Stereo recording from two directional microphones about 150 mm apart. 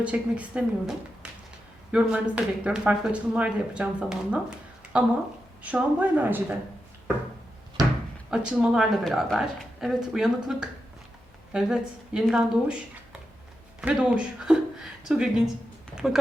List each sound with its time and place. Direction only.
0.0 s speech: 10° right (ahead or behind)
7.8 s drawer open or close: 25° right (ahead or behind)
8.3 s a woman's voice: 5° right (ahead or behind)
13.8 s a woman's voice: 5° right (ahead or behind)